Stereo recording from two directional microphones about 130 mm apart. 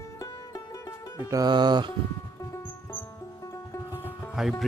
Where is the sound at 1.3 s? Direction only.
30° right (ahead or behind).